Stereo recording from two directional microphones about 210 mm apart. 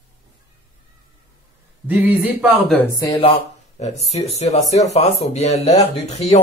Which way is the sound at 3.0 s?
15° left (ahead or behind).